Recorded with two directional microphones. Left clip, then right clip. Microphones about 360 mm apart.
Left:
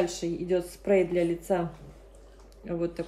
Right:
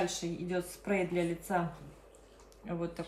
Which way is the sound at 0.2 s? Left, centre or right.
Centre.